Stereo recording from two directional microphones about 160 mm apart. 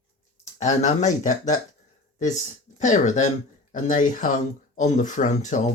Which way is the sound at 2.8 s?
50° left (ahead or behind).